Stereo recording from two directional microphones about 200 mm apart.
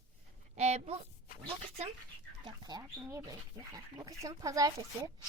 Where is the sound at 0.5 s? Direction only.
35° right (ahead or behind).